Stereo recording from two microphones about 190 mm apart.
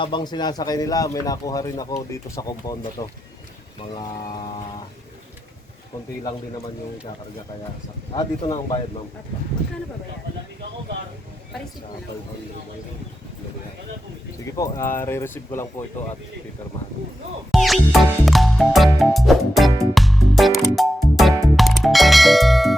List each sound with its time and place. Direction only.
0.0 s speech: 25° left (ahead or behind)
8.1 s speech: 25° left (ahead or behind)
14.5 s speech: 15° left (ahead or behind)
17.5 s music: centre (ahead or behind)